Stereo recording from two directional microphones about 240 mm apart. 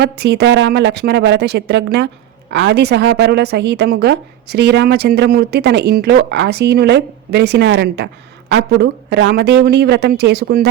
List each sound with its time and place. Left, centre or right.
0.0 s a woman's voice: right